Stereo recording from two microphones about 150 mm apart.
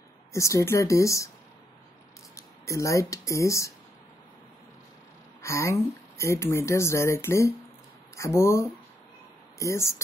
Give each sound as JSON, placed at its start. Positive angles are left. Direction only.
{"t": 0.3, "sound": "speech", "side_deg": 20}
{"t": 2.3, "sound": "speech", "side_deg": 20}
{"t": 5.4, "sound": "speech", "side_deg": 20}